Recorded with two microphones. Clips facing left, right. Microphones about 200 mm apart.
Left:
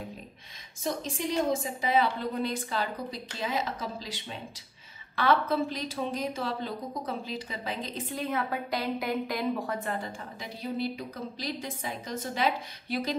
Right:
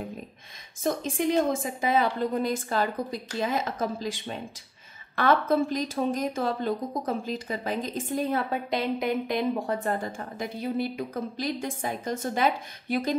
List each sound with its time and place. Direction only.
0.8 s a woman's voice: 50° right (ahead or behind)
8.5 s a woman's voice: 20° right (ahead or behind)
9.8 s a woman's voice: 45° right (ahead or behind)